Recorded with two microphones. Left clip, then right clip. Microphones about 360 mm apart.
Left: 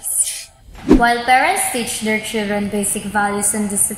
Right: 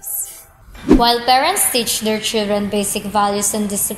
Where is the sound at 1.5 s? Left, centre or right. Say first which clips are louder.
Right 1 dB; right.